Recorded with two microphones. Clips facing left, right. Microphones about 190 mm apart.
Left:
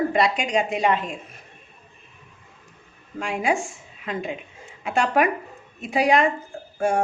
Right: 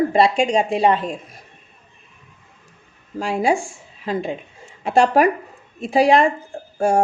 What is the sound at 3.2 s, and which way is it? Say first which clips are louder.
A woman's voice: right 4 dB; 35° right (ahead or behind).